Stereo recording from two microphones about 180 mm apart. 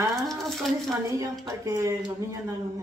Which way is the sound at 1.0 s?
15° right (ahead or behind).